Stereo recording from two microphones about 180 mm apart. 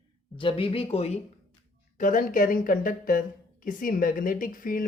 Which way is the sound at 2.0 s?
50° left (ahead or behind).